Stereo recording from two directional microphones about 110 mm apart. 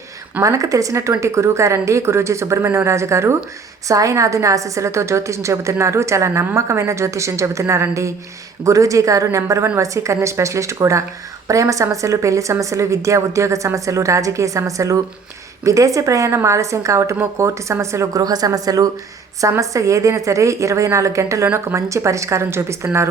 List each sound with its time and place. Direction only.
0.4 s a woman's voice: 30° right (ahead or behind)